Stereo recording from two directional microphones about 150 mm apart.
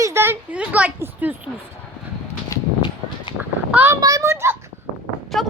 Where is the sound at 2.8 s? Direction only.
35° left (ahead or behind).